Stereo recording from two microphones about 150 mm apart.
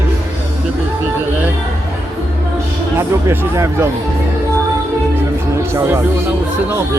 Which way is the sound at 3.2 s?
20° right (ahead or behind).